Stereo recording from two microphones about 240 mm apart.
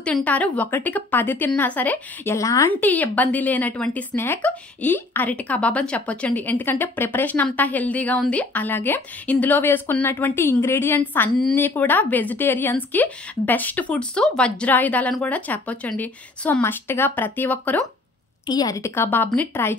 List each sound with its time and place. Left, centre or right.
0.0 s a woman's voice: centre